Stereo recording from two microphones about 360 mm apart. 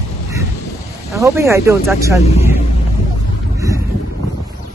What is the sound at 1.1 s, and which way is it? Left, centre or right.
Speech, centre.